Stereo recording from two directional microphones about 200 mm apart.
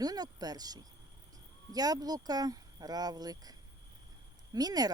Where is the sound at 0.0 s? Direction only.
20° right (ahead or behind).